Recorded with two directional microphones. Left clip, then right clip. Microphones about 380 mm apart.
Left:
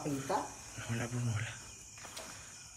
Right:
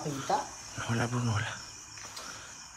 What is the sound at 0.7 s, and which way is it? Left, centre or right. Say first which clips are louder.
Speech: right 9 dB; centre.